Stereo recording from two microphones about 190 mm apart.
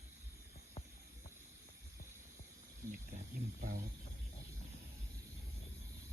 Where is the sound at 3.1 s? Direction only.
45° right (ahead or behind).